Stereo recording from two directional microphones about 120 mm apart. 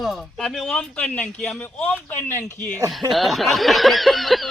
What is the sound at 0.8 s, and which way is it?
Speech, 10° left (ahead or behind).